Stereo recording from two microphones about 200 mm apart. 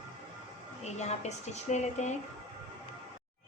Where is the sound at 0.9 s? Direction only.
35° left (ahead or behind).